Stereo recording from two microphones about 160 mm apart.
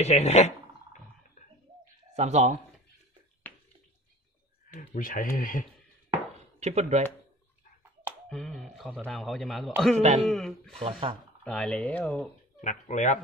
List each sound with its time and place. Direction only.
0.0 s speech: 45° left (ahead or behind)
2.1 s speech: 45° right (ahead or behind)
4.7 s speech: 55° left (ahead or behind)
6.6 s speech: 45° right (ahead or behind)
8.3 s a man's voice: 5° left (ahead or behind)
9.9 s speech: 40° right (ahead or behind)
10.2 s a man's voice: 5° left (ahead or behind)
10.8 s speech: 35° right (ahead or behind)
11.4 s speech: 5° left (ahead or behind)
12.6 s speech: 50° left (ahead or behind)